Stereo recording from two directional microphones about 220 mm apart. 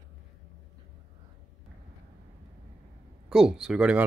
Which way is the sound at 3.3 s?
5° right (ahead or behind).